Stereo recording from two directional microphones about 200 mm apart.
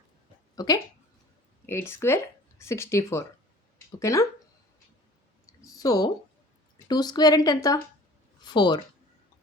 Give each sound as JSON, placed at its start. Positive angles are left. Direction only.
{"t": 0.5, "sound": "speech", "side_deg": 20}
{"t": 5.5, "sound": "a sound", "side_deg": 15}
{"t": 6.8, "sound": "a woman's voice", "side_deg": 20}